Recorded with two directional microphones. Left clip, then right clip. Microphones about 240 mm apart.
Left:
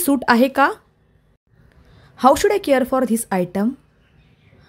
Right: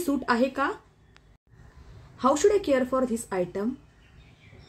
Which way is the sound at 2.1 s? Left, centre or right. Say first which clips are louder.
Left 7 dB; left.